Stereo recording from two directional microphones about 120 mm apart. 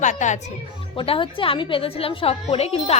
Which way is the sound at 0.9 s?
45° left (ahead or behind).